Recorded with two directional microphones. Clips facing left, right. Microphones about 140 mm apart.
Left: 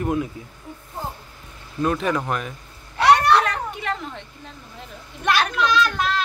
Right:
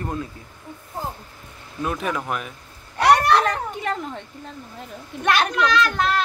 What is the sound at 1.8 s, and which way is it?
Speech, 5° right (ahead or behind).